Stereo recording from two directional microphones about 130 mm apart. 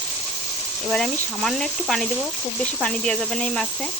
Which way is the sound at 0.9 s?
5° left (ahead or behind).